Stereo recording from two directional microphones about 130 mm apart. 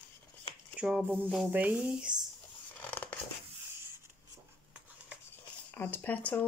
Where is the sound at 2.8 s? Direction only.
10° left (ahead or behind).